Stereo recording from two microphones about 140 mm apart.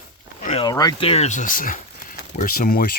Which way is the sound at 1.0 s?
45° left (ahead or behind).